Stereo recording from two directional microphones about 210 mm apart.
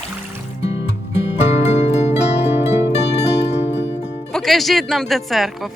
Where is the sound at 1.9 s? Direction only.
30° left (ahead or behind).